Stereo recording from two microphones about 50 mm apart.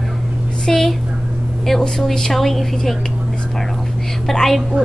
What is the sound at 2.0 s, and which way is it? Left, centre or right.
Speech, centre.